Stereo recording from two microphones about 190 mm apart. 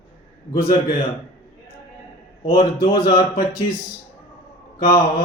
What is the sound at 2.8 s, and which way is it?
Speech, 50° left (ahead or behind).